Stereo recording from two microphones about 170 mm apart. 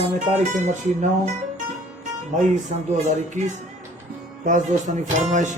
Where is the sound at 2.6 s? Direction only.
45° right (ahead or behind).